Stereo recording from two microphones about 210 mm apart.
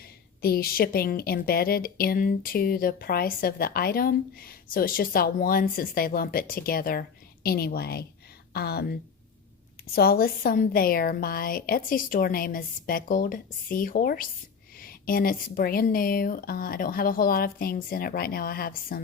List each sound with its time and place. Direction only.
0.4 s a woman's voice: 45° left (ahead or behind)
9.9 s a woman's voice: 45° left (ahead or behind)